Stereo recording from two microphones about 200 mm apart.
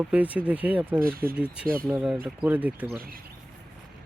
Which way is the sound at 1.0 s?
45° right (ahead or behind).